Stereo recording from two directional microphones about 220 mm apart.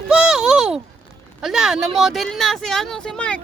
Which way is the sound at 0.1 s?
5° right (ahead or behind).